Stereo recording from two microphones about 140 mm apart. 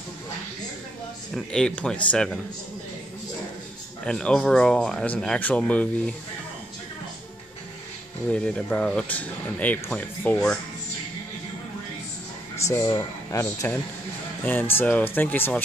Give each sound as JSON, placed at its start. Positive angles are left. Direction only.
{"t": 1.3, "sound": "speech", "side_deg": 5}
{"t": 4.0, "sound": "speech", "side_deg": 5}
{"t": 8.3, "sound": "speech", "side_deg": 5}
{"t": 12.6, "sound": "speech", "side_deg": 20}